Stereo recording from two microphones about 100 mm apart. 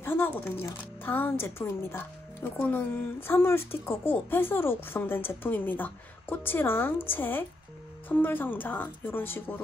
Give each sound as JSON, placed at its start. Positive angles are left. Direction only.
{"t": 0.0, "sound": "speech", "side_deg": 25}